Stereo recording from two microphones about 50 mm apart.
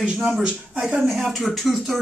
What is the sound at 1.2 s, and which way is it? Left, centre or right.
Speech, centre.